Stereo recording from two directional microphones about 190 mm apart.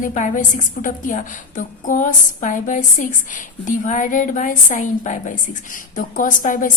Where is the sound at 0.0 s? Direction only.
40° left (ahead or behind).